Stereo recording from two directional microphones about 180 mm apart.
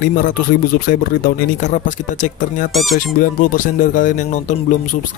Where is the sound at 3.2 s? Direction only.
45° left (ahead or behind).